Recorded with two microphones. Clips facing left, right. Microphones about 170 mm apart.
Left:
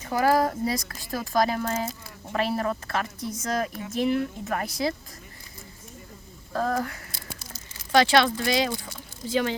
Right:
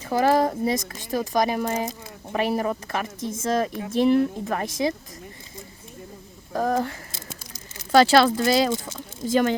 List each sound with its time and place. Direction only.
0.0 s a woman's voice: 25° right (ahead or behind)
6.5 s a sound: 15° right (ahead or behind)
7.9 s a woman's voice: 35° right (ahead or behind)